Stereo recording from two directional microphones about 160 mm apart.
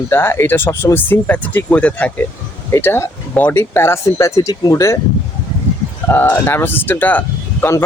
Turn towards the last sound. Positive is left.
turn(degrees=15)  # may be behind; listen again after turning